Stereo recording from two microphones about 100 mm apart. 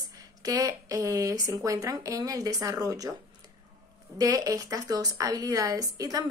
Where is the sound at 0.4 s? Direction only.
35° right (ahead or behind).